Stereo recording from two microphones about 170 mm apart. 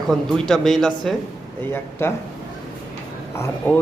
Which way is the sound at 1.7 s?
15° left (ahead or behind).